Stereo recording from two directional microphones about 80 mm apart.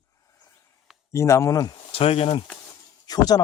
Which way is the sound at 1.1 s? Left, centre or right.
Left.